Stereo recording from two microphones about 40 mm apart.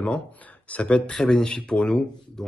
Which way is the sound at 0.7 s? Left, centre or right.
Left.